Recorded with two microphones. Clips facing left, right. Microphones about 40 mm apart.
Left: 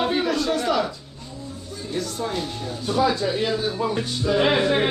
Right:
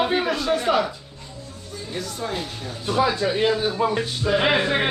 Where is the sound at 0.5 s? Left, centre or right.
Right.